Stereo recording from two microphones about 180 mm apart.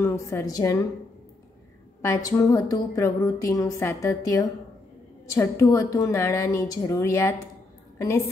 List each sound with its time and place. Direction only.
0.0 s a woman's voice: 15° left (ahead or behind)
2.0 s a woman's voice: 15° left (ahead or behind)